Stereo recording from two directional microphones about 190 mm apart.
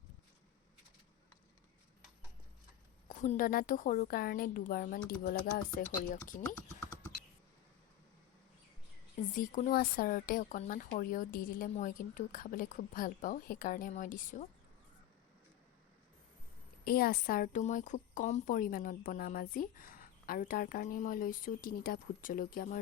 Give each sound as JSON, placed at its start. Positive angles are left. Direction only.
{"t": 3.1, "sound": "a woman's voice", "side_deg": 45}
{"t": 6.4, "sound": "typing", "side_deg": 10}
{"t": 9.3, "sound": "a woman's voice", "side_deg": 45}
{"t": 16.8, "sound": "a woman's voice", "side_deg": 50}